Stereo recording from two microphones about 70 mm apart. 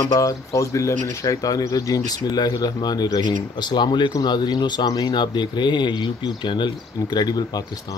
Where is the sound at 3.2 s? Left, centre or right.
Left.